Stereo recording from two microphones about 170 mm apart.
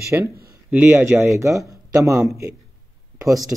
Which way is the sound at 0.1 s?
15° right (ahead or behind).